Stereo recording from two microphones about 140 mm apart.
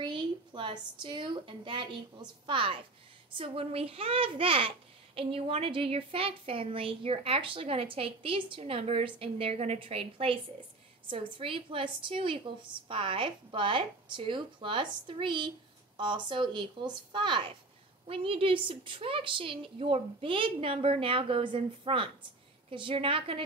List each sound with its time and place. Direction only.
0.0 s a woman's voice: 35° right (ahead or behind)